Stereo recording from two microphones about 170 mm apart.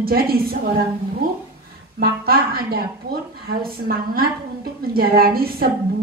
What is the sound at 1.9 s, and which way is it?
Speech, 65° right (ahead or behind).